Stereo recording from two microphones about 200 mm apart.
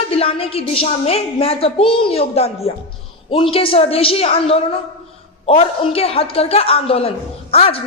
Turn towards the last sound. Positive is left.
turn(degrees=30)  # may be behind; listen again after turning